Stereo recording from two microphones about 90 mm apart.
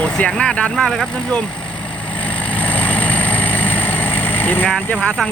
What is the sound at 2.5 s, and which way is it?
Vehicle, 15° left (ahead or behind).